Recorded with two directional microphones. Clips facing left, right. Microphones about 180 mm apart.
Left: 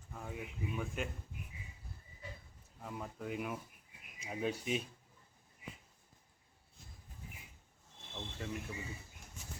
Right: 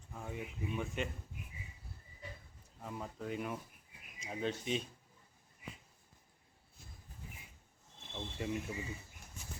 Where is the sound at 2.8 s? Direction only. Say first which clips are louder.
Right 1 dB; centre (ahead or behind).